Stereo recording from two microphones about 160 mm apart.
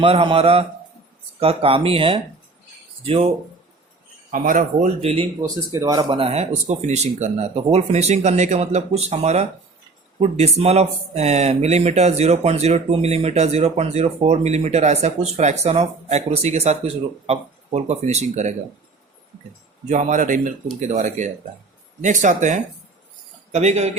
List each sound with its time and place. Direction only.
0.0 s speech: 35° right (ahead or behind)
4.3 s speech: 55° right (ahead or behind)
5.7 s speech: 25° right (ahead or behind); by 18.5 s 45° right (ahead or behind)
19.9 s speech: 50° right (ahead or behind)